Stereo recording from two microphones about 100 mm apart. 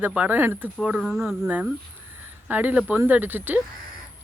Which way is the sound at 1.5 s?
15° right (ahead or behind).